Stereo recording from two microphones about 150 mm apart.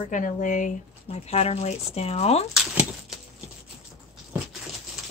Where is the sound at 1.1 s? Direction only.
45° left (ahead or behind).